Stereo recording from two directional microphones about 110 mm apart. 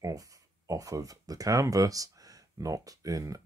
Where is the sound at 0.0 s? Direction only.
30° right (ahead or behind).